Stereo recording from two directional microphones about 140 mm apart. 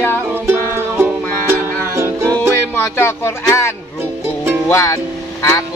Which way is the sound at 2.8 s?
15° left (ahead or behind).